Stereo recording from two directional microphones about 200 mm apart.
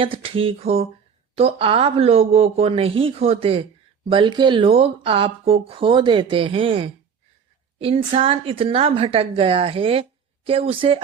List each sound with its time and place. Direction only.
0.0 s a woman's voice: 25° right (ahead or behind)